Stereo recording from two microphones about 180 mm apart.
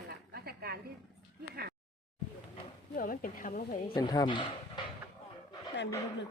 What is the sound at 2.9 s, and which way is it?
A woman's voice, 50° left (ahead or behind).